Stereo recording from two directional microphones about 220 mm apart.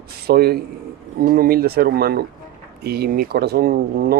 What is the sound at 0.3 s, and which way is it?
Speech, 45° right (ahead or behind).